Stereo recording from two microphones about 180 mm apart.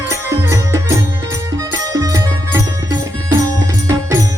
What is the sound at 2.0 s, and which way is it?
Music, 20° right (ahead or behind).